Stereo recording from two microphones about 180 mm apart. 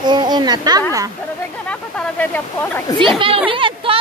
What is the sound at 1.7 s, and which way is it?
Speech, 10° left (ahead or behind).